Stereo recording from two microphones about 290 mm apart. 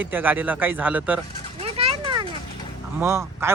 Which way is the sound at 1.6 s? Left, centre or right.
Centre.